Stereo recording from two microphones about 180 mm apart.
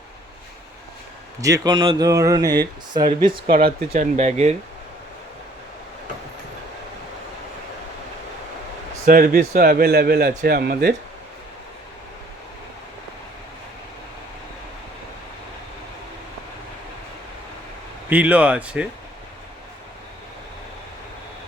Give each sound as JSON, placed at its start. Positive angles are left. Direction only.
{"t": 1.4, "sound": "speech", "side_deg": -20}
{"t": 3.2, "sound": "speech", "side_deg": -55}
{"t": 9.0, "sound": "a man's voice", "side_deg": -55}
{"t": 18.1, "sound": "speech", "side_deg": -10}